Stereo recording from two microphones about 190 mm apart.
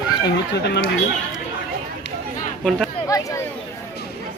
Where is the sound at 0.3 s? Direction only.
60° left (ahead or behind).